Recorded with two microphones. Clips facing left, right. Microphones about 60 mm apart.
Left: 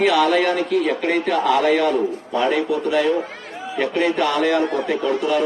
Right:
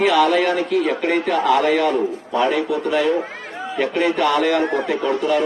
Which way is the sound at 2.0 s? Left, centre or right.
Centre.